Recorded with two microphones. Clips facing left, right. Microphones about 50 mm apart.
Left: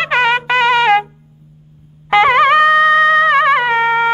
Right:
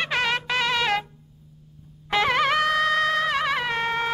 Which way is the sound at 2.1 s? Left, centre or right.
Left.